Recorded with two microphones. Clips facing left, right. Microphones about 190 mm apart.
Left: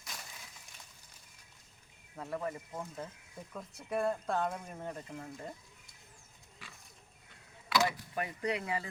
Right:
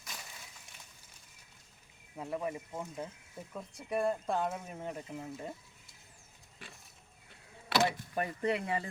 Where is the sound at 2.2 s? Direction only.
10° right (ahead or behind).